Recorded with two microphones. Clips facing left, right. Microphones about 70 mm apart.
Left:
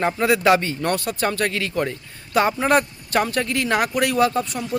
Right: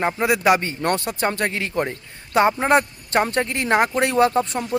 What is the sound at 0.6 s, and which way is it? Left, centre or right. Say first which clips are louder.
Speech: even; right.